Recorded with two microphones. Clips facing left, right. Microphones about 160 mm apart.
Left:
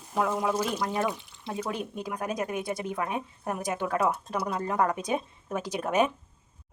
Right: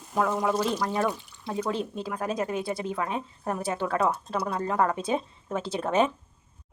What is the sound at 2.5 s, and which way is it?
Speech, 20° left (ahead or behind).